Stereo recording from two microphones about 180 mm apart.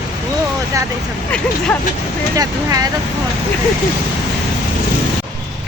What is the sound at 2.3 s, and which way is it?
Speech, 20° right (ahead or behind).